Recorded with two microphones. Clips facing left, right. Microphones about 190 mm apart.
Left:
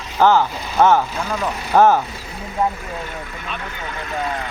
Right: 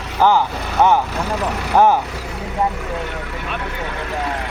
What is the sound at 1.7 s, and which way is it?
Speech, 15° right (ahead or behind).